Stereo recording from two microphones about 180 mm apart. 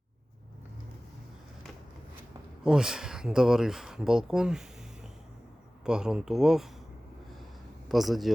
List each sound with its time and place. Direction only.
2.6 s speech: 5° right (ahead or behind)
5.8 s speech: 5° right (ahead or behind)
7.9 s speech: centre (ahead or behind)